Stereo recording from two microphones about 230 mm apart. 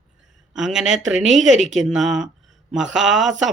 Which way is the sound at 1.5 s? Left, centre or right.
Right.